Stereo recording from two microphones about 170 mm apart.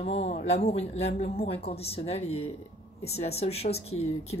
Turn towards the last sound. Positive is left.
turn(degrees=35)  # may be behind; listen again after turning